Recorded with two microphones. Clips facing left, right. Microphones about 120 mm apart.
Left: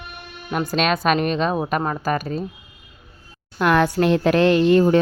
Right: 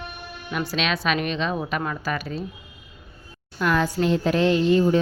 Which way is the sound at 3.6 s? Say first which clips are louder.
Left 5 dB; 60° left (ahead or behind).